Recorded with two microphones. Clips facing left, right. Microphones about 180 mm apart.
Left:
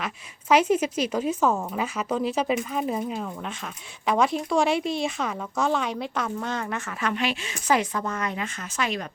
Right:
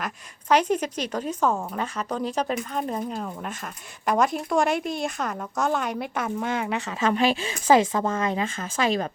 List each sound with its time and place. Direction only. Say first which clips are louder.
0.0 s a woman's voice: even; 5° left (ahead or behind); by 7.1 s 15° right (ahead or behind)
7.1 s speech: right 6 dB; 35° right (ahead or behind)